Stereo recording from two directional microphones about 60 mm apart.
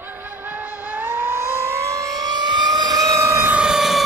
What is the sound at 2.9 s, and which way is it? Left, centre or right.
Vehicle, right.